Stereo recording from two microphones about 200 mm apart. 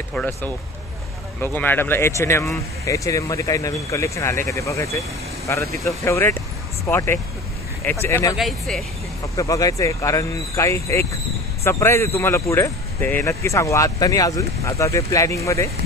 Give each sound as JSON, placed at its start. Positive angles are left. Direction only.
{"t": 0.1, "sound": "speech", "side_deg": 10}
{"t": 6.0, "sound": "speech", "side_deg": 10}
{"t": 8.4, "sound": "speech", "side_deg": 0}
{"t": 9.4, "sound": "speech", "side_deg": 15}